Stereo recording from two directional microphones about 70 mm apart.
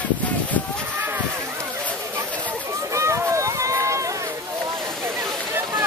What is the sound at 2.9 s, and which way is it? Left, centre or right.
Run, right.